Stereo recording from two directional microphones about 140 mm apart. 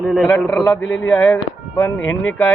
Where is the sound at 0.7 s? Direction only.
20° left (ahead or behind).